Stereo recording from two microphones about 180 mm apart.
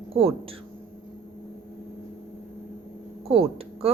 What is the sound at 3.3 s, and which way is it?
Speech, 30° right (ahead or behind).